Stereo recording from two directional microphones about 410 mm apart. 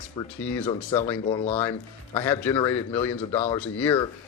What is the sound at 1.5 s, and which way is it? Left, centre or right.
A man's voice, centre.